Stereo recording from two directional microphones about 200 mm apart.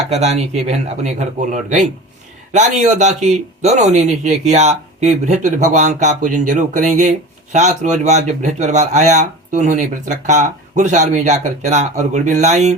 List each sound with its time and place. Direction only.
0.1 s speech: 35° right (ahead or behind)